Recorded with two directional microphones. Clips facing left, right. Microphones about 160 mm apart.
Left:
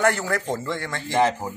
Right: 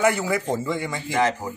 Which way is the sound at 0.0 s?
10° right (ahead or behind).